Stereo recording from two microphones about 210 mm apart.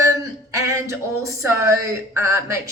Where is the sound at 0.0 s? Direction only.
15° right (ahead or behind).